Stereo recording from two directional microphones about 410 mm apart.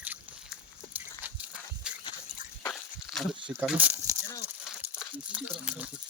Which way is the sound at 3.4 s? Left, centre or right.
Centre.